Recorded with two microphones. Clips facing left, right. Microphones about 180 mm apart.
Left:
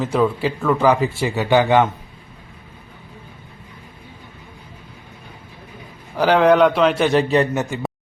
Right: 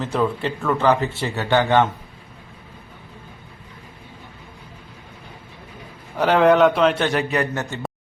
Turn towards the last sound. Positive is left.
turn(degrees=15)  # may be behind; listen again after turning